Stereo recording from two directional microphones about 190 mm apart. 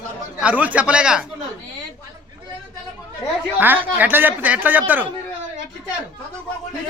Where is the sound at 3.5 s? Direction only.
10° right (ahead or behind).